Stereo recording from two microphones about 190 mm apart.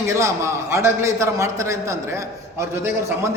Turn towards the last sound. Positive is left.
turn(degrees=-15)  # may be behind; listen again after turning